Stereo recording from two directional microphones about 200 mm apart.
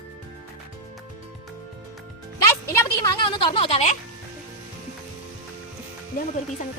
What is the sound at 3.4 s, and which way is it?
Speech, 25° left (ahead or behind).